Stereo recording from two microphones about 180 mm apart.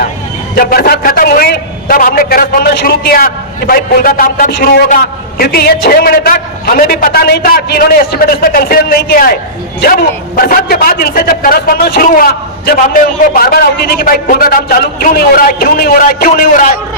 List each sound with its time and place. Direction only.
0.5 s a man's voice: 55° left (ahead or behind)